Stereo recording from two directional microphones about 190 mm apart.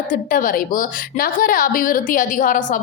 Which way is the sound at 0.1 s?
45° left (ahead or behind).